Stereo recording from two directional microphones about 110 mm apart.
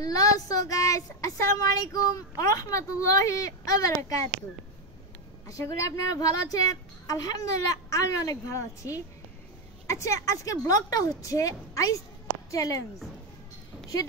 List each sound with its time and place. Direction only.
0.0 s speech: 35° left (ahead or behind)
5.5 s a woman's voice: 30° left (ahead or behind)